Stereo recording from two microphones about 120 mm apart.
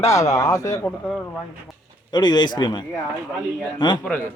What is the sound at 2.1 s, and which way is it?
Speech, 35° left (ahead or behind).